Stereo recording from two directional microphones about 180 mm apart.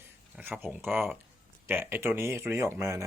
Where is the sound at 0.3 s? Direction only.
10° right (ahead or behind).